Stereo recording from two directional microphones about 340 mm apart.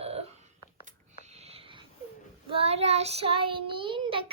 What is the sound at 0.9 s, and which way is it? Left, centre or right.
Sniff, centre.